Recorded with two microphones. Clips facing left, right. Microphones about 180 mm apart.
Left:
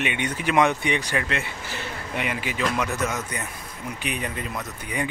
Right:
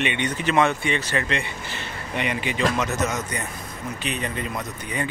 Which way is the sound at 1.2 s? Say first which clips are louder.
Right 2 dB; 5° left (ahead or behind).